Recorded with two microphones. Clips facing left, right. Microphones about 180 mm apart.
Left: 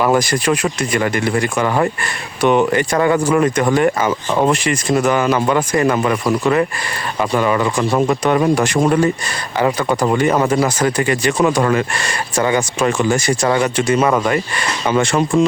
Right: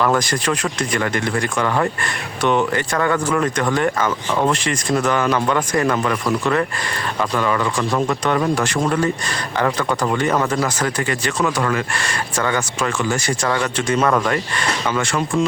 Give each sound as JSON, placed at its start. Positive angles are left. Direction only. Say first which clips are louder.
{"t": 0.0, "sound": "speech", "louder": "left 3 dB", "side_deg": 10}
{"t": 11.3, "sound": "speech", "louder": "left 4 dB", "side_deg": 25}
{"t": 14.9, "sound": "speech", "louder": "left 8 dB", "side_deg": 20}